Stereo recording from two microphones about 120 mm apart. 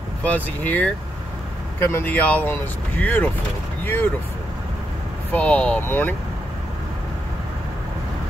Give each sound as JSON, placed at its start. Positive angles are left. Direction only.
{"t": 0.2, "sound": "speech", "side_deg": 15}
{"t": 5.3, "sound": "speech", "side_deg": 10}